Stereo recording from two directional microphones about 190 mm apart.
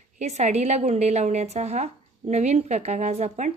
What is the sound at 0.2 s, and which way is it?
A woman's voice, 35° right (ahead or behind).